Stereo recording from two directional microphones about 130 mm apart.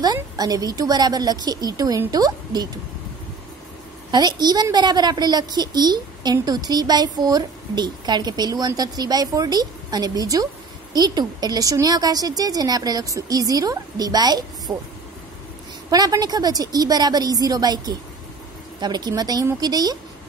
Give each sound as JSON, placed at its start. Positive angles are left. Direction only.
{"t": 0.0, "sound": "a woman's voice", "side_deg": -30}
{"t": 4.1, "sound": "a woman's voice", "side_deg": -35}
{"t": 15.9, "sound": "a woman's voice", "side_deg": -30}